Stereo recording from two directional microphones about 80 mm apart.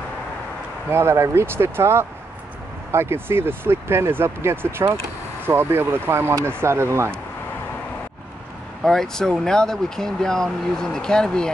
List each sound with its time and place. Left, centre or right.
0.8 s speech: right
8.8 s speech: centre